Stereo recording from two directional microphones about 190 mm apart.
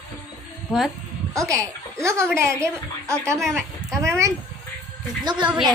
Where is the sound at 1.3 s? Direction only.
15° right (ahead or behind).